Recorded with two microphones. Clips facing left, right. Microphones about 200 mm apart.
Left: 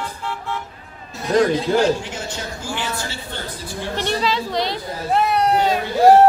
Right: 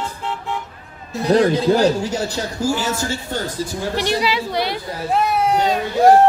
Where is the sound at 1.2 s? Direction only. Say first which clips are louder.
Right 2 dB; 35° right (ahead or behind).